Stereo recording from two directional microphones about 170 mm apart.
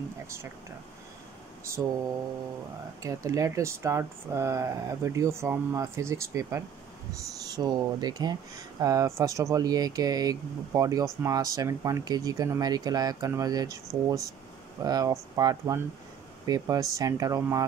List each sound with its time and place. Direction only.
1.6 s speech: 15° right (ahead or behind)